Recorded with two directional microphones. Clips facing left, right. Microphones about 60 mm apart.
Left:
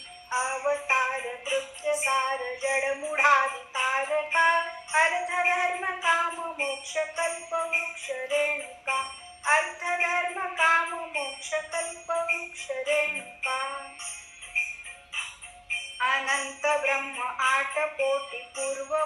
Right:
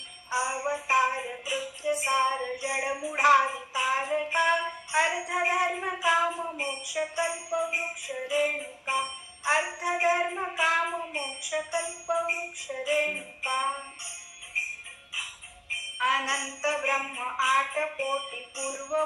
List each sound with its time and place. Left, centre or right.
0.3 s music: left
16.0 s music: left